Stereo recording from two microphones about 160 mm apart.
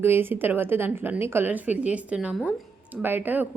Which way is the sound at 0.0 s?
15° right (ahead or behind).